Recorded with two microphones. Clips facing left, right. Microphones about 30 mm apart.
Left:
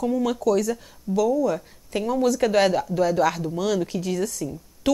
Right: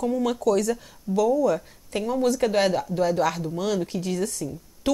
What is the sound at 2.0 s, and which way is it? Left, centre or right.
Speech, centre.